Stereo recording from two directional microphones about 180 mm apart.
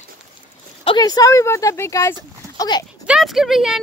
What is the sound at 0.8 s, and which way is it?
Speech, 25° left (ahead or behind).